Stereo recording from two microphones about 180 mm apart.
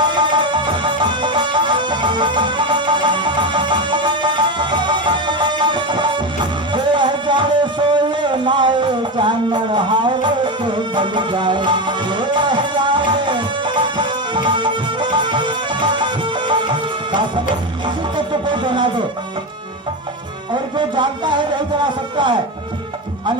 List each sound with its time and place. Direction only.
0.0 s music: 25° right (ahead or behind)
20.7 s music: 25° right (ahead or behind)